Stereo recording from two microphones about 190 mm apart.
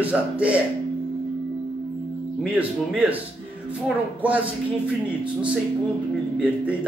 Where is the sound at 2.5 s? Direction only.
10° right (ahead or behind).